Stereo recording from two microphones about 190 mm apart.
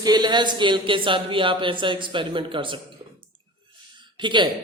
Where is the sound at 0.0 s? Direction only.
20° right (ahead or behind).